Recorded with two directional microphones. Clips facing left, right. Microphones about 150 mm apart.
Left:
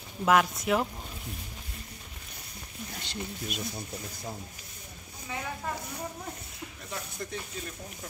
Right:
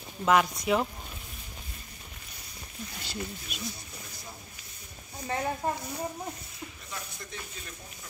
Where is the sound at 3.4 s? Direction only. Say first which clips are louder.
Left 4 dB; 45° left (ahead or behind).